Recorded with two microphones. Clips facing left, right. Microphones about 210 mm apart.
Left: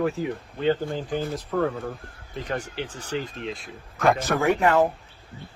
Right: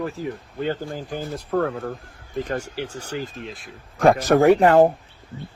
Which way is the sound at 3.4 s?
Centre (ahead or behind).